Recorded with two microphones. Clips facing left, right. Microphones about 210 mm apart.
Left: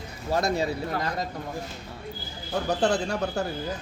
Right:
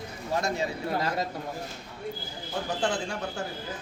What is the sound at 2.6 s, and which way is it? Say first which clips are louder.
Speech: left 5 dB; 40° left (ahead or behind).